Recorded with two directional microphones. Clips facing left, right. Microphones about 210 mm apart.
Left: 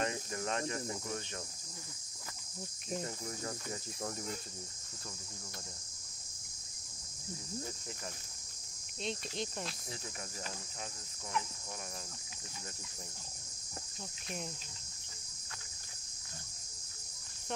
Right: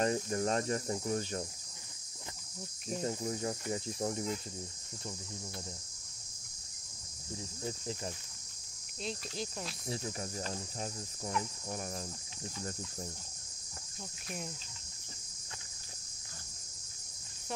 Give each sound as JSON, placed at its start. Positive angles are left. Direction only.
{"t": 0.0, "sound": "cricket", "side_deg": -35}
{"t": 3.1, "sound": "cricket", "side_deg": -20}
{"t": 9.0, "sound": "cricket", "side_deg": 0}
{"t": 10.5, "sound": "cricket", "side_deg": -35}